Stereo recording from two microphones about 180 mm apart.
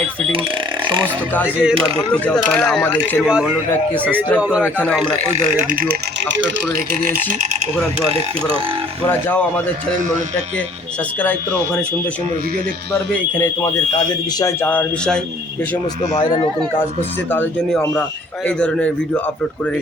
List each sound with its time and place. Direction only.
1.0 s speech: 10° left (ahead or behind)
1.5 s speech: 10° right (ahead or behind)
2.1 s speech: 5° left (ahead or behind)
4.6 s speech: 10° left (ahead or behind)
5.6 s speech: 55° right (ahead or behind)
8.1 s speech: 30° right (ahead or behind)
9.0 s speech: 10° left (ahead or behind)
11.2 s speech: 10° left (ahead or behind)
14.3 s speech: 15° left (ahead or behind)
17.3 s speech: 10° left (ahead or behind)